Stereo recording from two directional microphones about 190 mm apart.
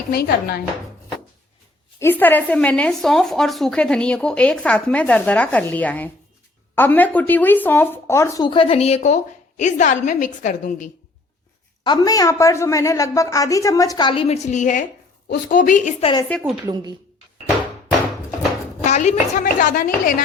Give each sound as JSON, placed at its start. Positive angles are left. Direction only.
{"t": 0.1, "sound": "speech", "side_deg": 55}
{"t": 2.0, "sound": "speech", "side_deg": 10}
{"t": 11.8, "sound": "a woman's voice", "side_deg": 20}
{"t": 16.6, "sound": "speech", "side_deg": -20}
{"t": 18.9, "sound": "a woman's voice", "side_deg": 35}